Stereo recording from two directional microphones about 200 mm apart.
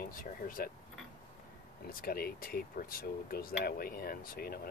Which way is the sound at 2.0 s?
50° left (ahead or behind).